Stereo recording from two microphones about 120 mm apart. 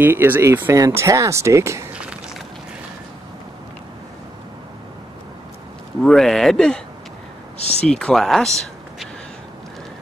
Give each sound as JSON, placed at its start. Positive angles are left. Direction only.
{"t": 0.0, "sound": "speech", "side_deg": -15}
{"t": 2.0, "sound": "walk", "side_deg": -10}
{"t": 6.0, "sound": "speech", "side_deg": 5}
{"t": 7.8, "sound": "speech", "side_deg": 5}